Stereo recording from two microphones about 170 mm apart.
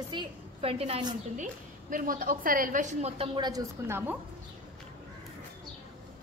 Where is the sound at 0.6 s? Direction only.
35° right (ahead or behind).